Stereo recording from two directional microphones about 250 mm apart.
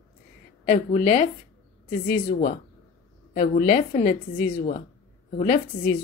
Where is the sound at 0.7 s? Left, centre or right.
Left.